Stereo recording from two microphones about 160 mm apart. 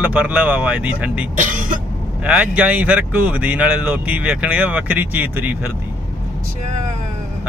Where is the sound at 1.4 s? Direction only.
55° right (ahead or behind).